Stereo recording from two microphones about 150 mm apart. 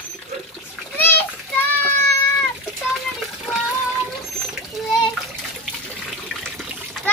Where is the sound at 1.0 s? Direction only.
15° left (ahead or behind).